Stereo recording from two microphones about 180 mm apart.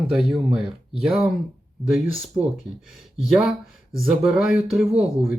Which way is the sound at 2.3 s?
25° right (ahead or behind).